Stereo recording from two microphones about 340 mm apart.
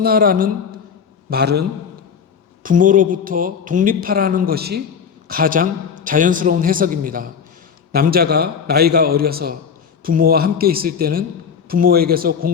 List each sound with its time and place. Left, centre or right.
0.0 s speech: right
2.6 s speech: right